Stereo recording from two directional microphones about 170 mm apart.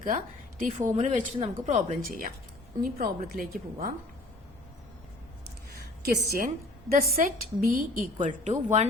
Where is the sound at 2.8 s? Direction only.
60° right (ahead or behind).